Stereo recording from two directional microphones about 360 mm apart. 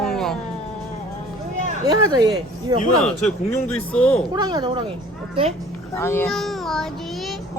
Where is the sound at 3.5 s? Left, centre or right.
Centre.